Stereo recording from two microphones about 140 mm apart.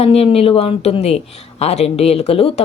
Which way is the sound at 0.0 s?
45° left (ahead or behind).